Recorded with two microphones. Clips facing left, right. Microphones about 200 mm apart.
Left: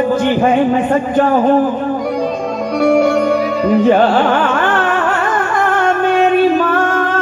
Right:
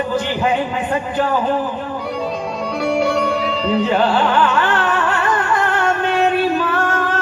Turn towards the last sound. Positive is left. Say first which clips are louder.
# left 5 dB
turn(degrees=50)  # may be behind; listen again after turning